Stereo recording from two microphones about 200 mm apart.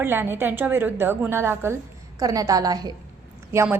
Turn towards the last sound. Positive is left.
turn(degrees=-10)  # may be behind; listen again after turning